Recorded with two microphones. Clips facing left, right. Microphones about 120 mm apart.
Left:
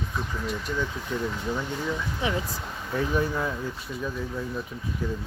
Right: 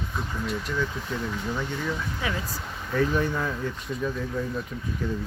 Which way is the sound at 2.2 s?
20° left (ahead or behind).